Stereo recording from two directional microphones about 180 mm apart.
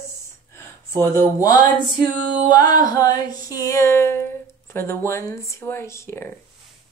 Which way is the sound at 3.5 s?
15° left (ahead or behind).